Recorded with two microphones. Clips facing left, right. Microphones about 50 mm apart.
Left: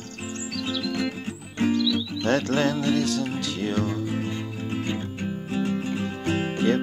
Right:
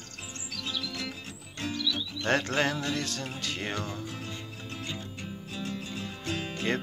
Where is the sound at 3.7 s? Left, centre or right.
Left.